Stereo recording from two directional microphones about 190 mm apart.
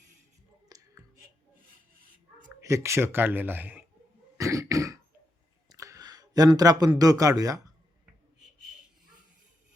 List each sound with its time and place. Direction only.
0.7 s a sound: 20° right (ahead or behind)
2.6 s speech: 15° right (ahead or behind)
4.4 s throat clearing: 15° right (ahead or behind)
5.6 s speech: 15° right (ahead or behind)